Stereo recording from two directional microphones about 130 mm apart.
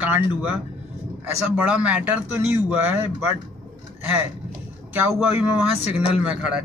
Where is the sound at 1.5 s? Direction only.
10° right (ahead or behind).